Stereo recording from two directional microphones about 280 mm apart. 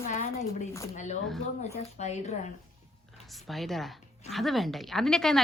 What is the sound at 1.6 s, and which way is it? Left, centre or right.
Speech, left.